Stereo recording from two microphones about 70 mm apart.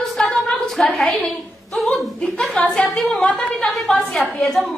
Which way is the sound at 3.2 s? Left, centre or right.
Centre.